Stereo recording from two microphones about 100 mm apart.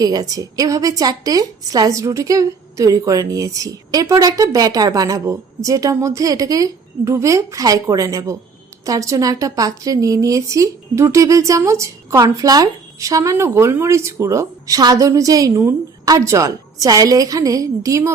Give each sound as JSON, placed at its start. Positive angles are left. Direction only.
{"t": 0.0, "sound": "a woman's voice", "side_deg": -40}